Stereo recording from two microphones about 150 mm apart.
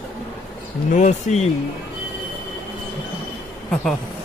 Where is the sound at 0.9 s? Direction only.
50° left (ahead or behind).